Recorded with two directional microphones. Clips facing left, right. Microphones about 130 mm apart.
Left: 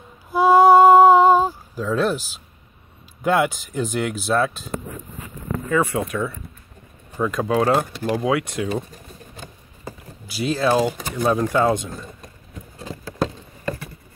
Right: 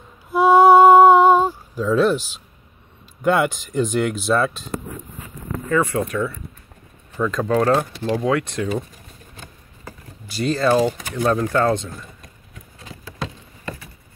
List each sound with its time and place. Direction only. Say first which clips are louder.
0.3 s a sound: right 1 dB; centre (ahead or behind)
3.2 s speech: right 1 dB; centre (ahead or behind)
5.7 s speech: right 1 dB; 10° left (ahead or behind)
9.8 s a sound: left 3 dB; 5° left (ahead or behind)
11.2 s speech: even; 10° left (ahead or behind)
12.7 s patter: left 8 dB; 35° left (ahead or behind)